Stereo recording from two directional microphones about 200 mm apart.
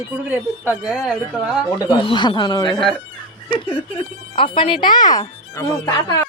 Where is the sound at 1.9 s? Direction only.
25° left (ahead or behind).